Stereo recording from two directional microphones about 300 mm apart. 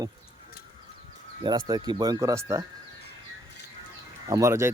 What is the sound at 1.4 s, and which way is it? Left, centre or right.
A man's voice, centre.